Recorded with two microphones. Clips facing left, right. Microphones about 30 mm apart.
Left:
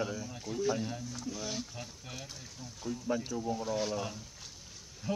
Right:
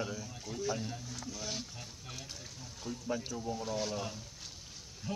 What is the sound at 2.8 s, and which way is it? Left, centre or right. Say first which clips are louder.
Speech: left 4 dB; right.